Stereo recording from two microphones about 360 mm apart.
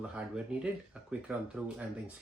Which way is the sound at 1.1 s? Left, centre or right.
Centre.